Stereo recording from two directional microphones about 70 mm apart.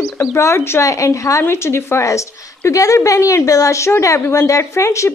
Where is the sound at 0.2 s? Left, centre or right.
Left.